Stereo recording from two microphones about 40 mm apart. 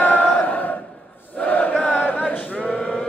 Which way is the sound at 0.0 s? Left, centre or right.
Left.